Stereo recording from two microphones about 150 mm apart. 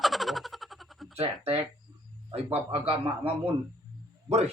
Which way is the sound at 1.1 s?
40° right (ahead or behind).